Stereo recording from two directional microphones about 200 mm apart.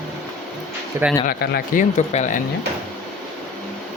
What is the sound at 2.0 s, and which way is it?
Speech, 35° left (ahead or behind).